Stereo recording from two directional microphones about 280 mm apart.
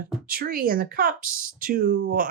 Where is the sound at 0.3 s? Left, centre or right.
Right.